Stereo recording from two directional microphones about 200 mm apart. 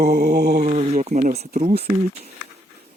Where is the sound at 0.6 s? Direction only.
35° right (ahead or behind).